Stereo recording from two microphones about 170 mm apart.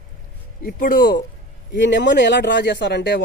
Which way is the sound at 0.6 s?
55° left (ahead or behind).